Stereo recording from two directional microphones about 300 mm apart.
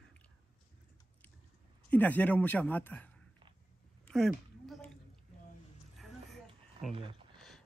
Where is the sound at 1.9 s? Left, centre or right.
Centre.